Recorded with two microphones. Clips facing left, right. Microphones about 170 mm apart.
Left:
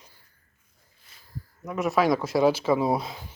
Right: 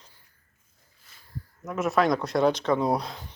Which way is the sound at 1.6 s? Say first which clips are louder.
Left 1 dB; centre (ahead or behind).